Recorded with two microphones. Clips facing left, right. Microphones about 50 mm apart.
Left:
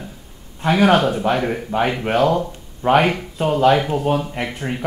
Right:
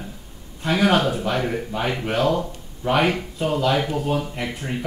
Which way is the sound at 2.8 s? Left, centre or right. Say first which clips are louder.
Left 4 dB; left.